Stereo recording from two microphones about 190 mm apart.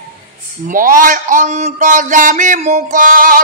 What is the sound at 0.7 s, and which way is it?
Speech, 45° right (ahead or behind).